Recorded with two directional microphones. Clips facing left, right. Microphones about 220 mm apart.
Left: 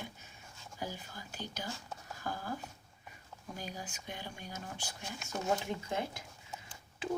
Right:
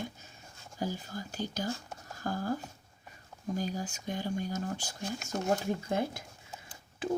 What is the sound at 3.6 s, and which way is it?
Speech, 45° right (ahead or behind).